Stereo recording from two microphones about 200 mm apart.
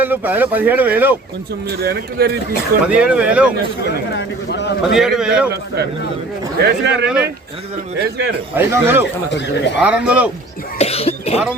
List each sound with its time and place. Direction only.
0.0 s speech: 10° right (ahead or behind)
1.8 s speech: 50° right (ahead or behind)
2.8 s speech: 5° right (ahead or behind)
4.1 s a man's voice: 60° left (ahead or behind)
4.9 s speech: centre (ahead or behind)
6.7 s speech: 60° right (ahead or behind)
8.5 s speech: 10° right (ahead or behind)
9.3 s a man's voice: 60° left (ahead or behind)
9.8 s speech: 5° right (ahead or behind)
10.8 s cough: 30° left (ahead or behind)